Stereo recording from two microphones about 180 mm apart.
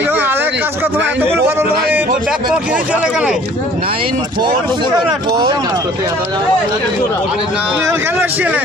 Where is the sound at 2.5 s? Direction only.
5° right (ahead or behind).